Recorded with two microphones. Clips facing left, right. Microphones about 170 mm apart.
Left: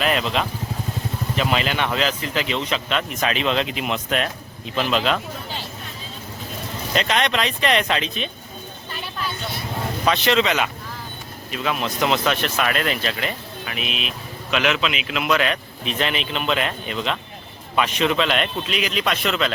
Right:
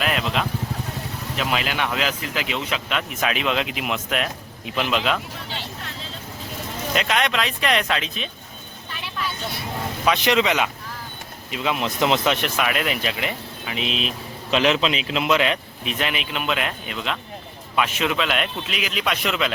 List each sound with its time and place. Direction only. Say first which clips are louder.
0.0 s vehicle: left 2 dB; 5° right (ahead or behind)
1.4 s speech: left 2 dB; 5° right (ahead or behind)
6.9 s speech: left 1 dB; 5° right (ahead or behind)
10.1 s speech: even; 15° right (ahead or behind)
15.8 s speech: left 2 dB; 10° right (ahead or behind)